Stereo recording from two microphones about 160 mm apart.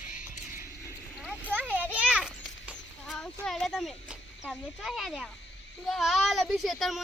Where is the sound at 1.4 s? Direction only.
10° right (ahead or behind).